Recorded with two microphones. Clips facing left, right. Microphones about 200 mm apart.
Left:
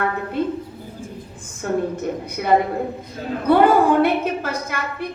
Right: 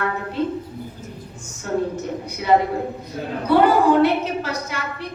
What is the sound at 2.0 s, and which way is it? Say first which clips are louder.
A woman's voice: left 2 dB; 55° left (ahead or behind).